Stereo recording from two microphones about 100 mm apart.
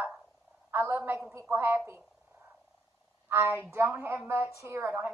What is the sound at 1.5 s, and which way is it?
Speech, 20° right (ahead or behind).